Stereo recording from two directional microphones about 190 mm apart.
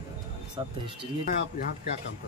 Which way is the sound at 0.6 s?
25° right (ahead or behind).